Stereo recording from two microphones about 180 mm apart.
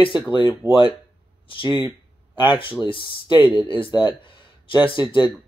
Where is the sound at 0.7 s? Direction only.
30° left (ahead or behind).